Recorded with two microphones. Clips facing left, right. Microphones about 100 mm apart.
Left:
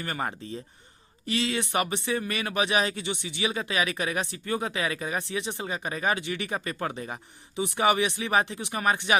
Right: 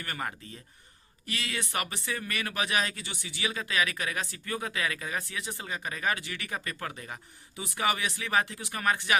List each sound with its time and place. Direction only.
0.0 s speech: 25° left (ahead or behind)